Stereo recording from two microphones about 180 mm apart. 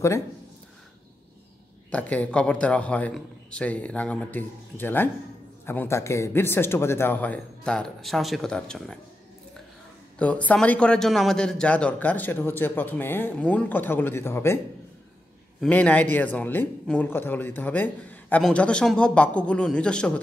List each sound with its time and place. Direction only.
1.9 s a man's voice: 10° left (ahead or behind)
10.1 s a man's voice: 5° left (ahead or behind)
15.6 s a man's voice: 10° left (ahead or behind)